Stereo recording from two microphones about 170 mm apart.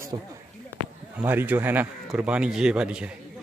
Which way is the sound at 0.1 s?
25° right (ahead or behind).